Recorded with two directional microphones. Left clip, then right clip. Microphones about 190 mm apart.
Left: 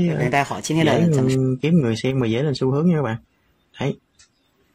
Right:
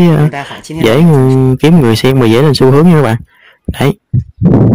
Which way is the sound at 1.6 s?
55° right (ahead or behind).